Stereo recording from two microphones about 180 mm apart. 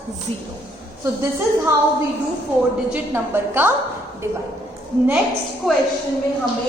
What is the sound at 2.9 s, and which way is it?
Speech, 10° right (ahead or behind).